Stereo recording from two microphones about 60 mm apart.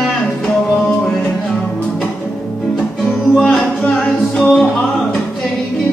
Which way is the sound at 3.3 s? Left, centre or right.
Centre.